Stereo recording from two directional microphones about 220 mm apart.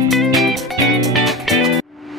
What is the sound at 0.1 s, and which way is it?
Music, centre (ahead or behind).